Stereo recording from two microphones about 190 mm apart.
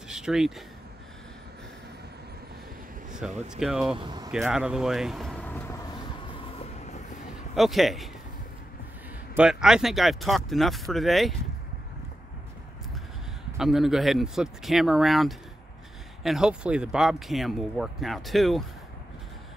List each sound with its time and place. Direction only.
0.1 s speech: 5° right (ahead or behind)
3.1 s a sound: 5° right (ahead or behind)
3.4 s speech: centre (ahead or behind)
4.0 s speech: 25° right (ahead or behind)
4.3 s speech: 5° right (ahead or behind)
5.9 s vehicle: 25° left (ahead or behind)
7.5 s speech: centre (ahead or behind)
9.3 s speech: 5° right (ahead or behind)
13.6 s speech: centre (ahead or behind)